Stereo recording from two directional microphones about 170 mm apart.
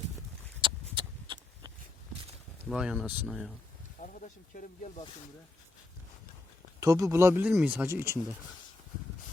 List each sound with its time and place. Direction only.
0.6 s a sound: 30° right (ahead or behind)
2.6 s speech: 5° right (ahead or behind)
4.0 s speech: 50° left (ahead or behind)
6.7 s speech: 20° right (ahead or behind)